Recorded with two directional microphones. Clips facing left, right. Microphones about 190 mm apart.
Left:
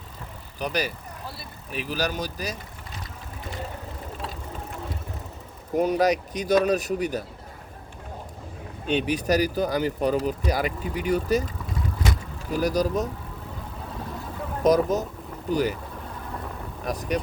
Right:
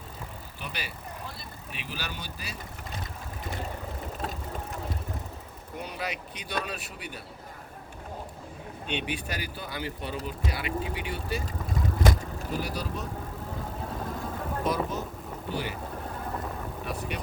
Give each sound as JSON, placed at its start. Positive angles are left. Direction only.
{"t": 0.6, "sound": "speech", "side_deg": 40}
{"t": 5.7, "sound": "speech", "side_deg": 45}
{"t": 8.9, "sound": "speech", "side_deg": 40}
{"t": 12.5, "sound": "speech", "side_deg": 40}
{"t": 14.6, "sound": "speech", "side_deg": 40}
{"t": 16.8, "sound": "speech", "side_deg": 40}